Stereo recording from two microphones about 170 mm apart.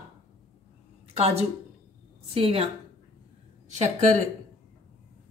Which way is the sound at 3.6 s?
40° right (ahead or behind).